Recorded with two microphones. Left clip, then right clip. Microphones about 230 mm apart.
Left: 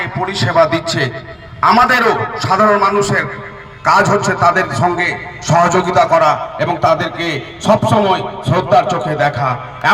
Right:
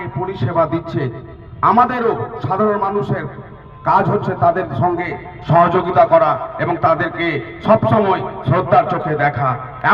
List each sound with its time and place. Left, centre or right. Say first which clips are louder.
0.0 s a man's voice: left 6 dB; left
6.6 s a man's voice: even; left